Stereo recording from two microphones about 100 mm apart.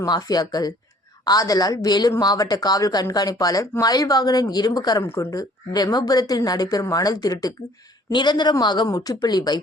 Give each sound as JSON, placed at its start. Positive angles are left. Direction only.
{"t": 0.0, "sound": "a woman's voice", "side_deg": 40}
{"t": 5.0, "sound": "speech", "side_deg": 25}
{"t": 5.3, "sound": "a woman's voice", "side_deg": 40}